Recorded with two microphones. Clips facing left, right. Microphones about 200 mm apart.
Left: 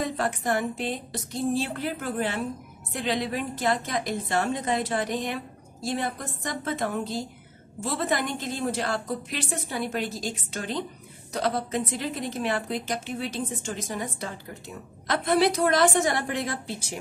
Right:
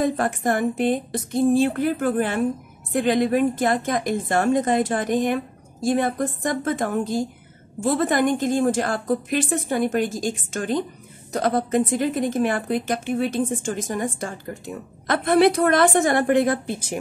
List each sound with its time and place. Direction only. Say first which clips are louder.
0.0 s a woman's voice: right 6 dB; 50° right (ahead or behind)